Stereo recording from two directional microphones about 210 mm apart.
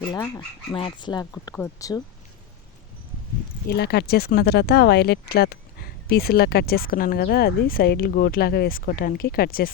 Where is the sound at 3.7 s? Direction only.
50° left (ahead or behind).